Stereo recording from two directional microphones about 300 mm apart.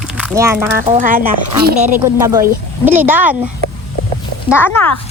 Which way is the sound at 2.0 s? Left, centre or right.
Centre.